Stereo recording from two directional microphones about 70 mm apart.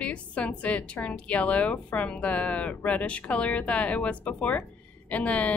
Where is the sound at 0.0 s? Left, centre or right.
Centre.